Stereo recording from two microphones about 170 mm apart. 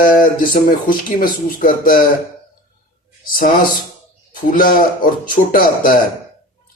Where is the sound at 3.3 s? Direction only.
55° left (ahead or behind).